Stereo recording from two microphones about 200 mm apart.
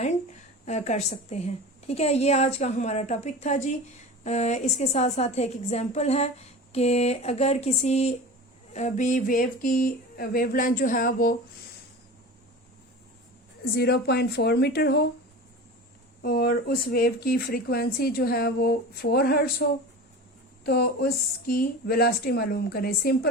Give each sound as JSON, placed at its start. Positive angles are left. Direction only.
{"t": 0.6, "sound": "a woman's voice", "side_deg": 35}
{"t": 13.7, "sound": "speech", "side_deg": 55}
{"t": 16.2, "sound": "speech", "side_deg": 50}
{"t": 20.7, "sound": "speech", "side_deg": 50}